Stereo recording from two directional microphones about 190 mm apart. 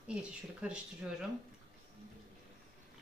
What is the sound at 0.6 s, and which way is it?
Speech, 5° right (ahead or behind).